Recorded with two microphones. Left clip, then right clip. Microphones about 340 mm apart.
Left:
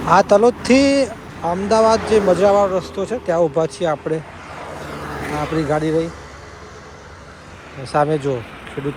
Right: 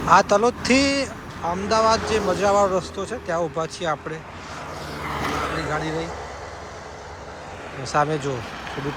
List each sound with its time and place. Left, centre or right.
0.0 s speech: centre
5.2 s a sound: right
5.7 s speech: centre
7.9 s speech: centre